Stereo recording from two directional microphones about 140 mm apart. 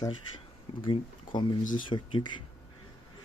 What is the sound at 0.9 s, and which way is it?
Speech, 35° left (ahead or behind).